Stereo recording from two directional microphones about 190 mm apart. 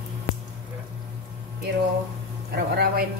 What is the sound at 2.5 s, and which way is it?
Speech, 55° right (ahead or behind).